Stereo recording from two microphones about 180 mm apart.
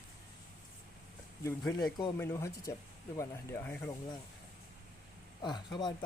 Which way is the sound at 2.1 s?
15° left (ahead or behind).